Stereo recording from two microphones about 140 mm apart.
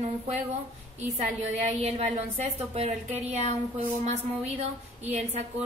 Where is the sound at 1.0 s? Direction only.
55° right (ahead or behind).